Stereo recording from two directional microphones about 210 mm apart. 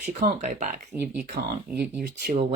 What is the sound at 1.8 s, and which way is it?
Speech, 40° right (ahead or behind).